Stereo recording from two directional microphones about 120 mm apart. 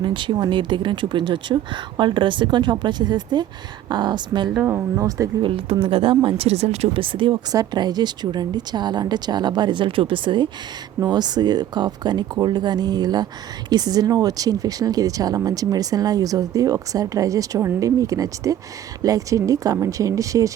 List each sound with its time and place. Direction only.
0.0 s speech: 40° right (ahead or behind)
4.6 s speech: 25° right (ahead or behind)
5.4 s speech: 50° right (ahead or behind)
7.5 s speech: 30° right (ahead or behind)